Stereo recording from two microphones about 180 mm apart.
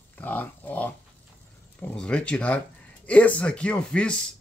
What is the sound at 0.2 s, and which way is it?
Pig, 10° left (ahead or behind).